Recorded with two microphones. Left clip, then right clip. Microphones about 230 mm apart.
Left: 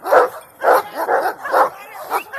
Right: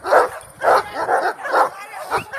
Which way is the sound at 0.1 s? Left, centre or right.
Right.